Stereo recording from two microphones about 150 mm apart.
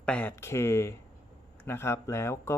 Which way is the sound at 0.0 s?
10° left (ahead or behind).